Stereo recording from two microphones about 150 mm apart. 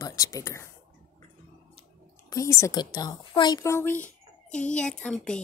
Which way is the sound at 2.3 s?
20° left (ahead or behind).